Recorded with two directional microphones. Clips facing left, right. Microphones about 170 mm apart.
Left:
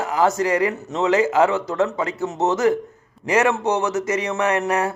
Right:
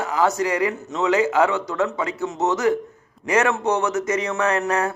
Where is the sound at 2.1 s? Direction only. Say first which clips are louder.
Left 2 dB; 40° left (ahead or behind).